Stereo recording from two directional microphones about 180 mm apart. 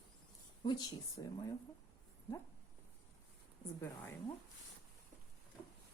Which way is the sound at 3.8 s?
15° left (ahead or behind).